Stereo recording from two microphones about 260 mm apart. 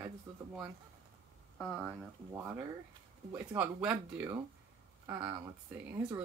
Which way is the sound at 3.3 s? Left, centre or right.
Centre.